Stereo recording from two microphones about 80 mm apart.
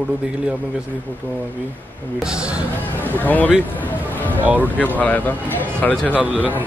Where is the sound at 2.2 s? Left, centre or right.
Centre.